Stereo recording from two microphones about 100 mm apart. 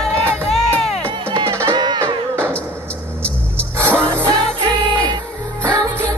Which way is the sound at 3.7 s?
20° right (ahead or behind).